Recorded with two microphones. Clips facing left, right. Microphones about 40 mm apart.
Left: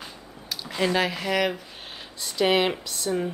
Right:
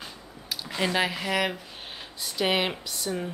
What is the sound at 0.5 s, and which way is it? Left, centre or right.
Speech, centre.